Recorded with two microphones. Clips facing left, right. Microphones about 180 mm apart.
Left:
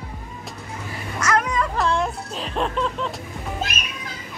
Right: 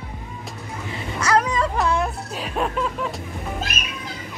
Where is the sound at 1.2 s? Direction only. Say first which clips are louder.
Right 2 dB; 30° right (ahead or behind).